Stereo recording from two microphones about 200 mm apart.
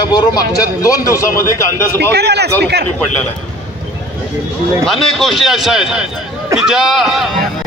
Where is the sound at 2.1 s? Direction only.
55° right (ahead or behind).